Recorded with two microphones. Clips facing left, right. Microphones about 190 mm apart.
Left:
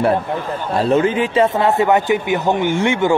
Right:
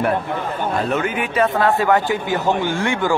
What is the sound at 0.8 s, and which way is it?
A man's voice, 30° left (ahead or behind).